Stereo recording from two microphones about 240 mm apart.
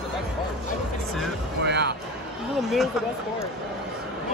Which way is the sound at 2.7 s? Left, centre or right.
Centre.